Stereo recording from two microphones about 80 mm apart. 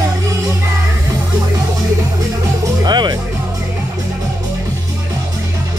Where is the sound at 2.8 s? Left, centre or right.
Right.